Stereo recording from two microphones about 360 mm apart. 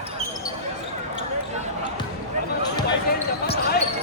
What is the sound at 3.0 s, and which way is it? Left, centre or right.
Basketball bounce, left.